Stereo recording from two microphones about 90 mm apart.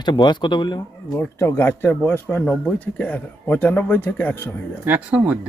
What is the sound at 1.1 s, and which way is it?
Speech, 30° left (ahead or behind).